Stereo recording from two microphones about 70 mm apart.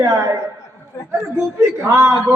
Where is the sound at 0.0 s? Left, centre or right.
Right.